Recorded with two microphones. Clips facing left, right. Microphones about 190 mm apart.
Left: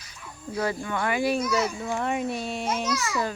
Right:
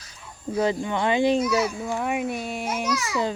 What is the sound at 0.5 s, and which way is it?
Speech, 20° right (ahead or behind).